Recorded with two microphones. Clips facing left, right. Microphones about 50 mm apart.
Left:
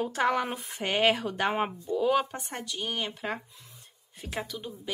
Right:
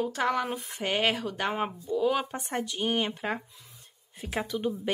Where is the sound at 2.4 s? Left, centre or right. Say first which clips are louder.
Right 5 dB; centre.